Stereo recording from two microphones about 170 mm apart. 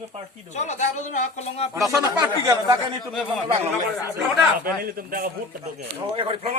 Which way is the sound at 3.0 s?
Centre (ahead or behind).